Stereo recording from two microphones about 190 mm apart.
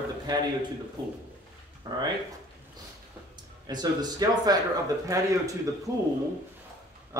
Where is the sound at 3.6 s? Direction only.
20° right (ahead or behind).